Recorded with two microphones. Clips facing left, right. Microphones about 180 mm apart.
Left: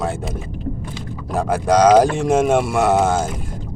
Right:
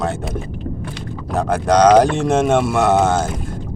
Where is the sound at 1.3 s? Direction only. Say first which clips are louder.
Right 1 dB; 10° left (ahead or behind).